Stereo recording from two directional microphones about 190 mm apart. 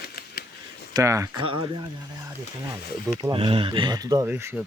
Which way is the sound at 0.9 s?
15° right (ahead or behind).